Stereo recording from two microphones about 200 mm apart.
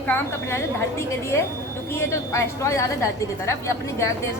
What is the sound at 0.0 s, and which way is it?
A woman's voice, 10° left (ahead or behind).